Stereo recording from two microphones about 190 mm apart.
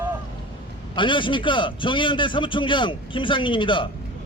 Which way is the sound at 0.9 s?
25° left (ahead or behind).